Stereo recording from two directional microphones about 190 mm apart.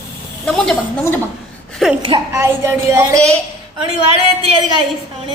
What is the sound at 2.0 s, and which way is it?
Speech, 25° right (ahead or behind).